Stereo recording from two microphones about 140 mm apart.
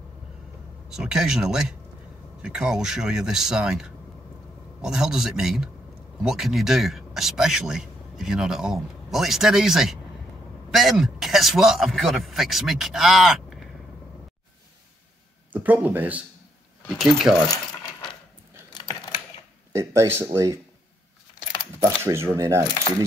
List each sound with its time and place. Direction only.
0.8 s a man's voice: 5° right (ahead or behind)
15.5 s a man's voice: 10° right (ahead or behind)
18.8 s typing: 35° left (ahead or behind)
19.7 s speech: 20° right (ahead or behind)
21.7 s speech: 20° right (ahead or behind)